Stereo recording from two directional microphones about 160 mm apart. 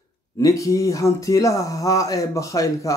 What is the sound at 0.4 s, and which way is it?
Speech, 20° left (ahead or behind).